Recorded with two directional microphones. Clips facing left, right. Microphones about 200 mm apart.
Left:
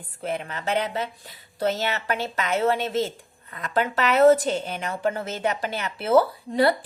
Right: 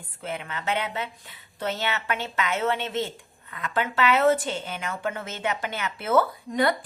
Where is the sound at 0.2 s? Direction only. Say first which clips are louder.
Left 4 dB; 40° left (ahead or behind).